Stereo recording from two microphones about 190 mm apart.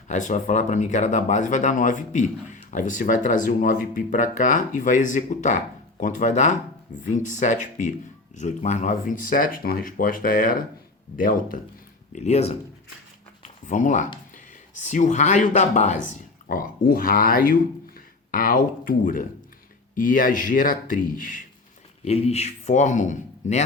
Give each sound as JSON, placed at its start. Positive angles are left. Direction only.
{"t": 0.1, "sound": "speech", "side_deg": 40}
{"t": 12.1, "sound": "speech", "side_deg": 35}
{"t": 16.5, "sound": "speech", "side_deg": 50}
{"t": 22.0, "sound": "speech", "side_deg": 35}